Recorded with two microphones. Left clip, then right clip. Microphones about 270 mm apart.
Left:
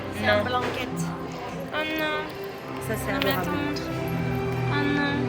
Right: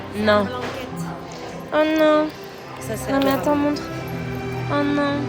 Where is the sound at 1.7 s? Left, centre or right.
Centre.